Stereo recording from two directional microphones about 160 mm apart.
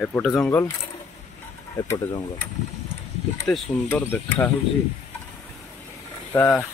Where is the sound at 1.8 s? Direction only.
25° left (ahead or behind).